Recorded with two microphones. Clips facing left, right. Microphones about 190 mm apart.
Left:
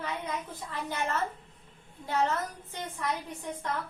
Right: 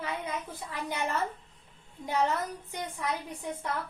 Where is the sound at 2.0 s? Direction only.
15° right (ahead or behind).